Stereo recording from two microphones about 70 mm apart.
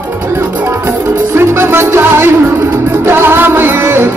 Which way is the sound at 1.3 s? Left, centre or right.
Right.